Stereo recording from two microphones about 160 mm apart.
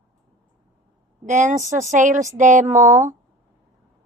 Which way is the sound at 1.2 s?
50° right (ahead or behind).